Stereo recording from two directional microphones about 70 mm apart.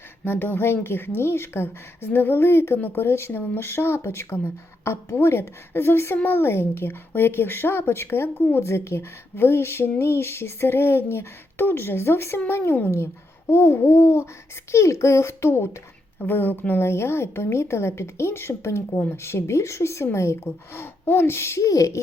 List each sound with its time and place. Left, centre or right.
0.3 s a woman's voice: left